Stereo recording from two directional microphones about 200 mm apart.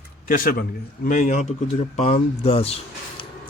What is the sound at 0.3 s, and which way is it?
Speech, 45° left (ahead or behind).